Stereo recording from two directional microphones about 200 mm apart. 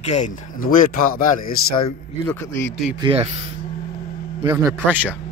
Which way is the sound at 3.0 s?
25° right (ahead or behind).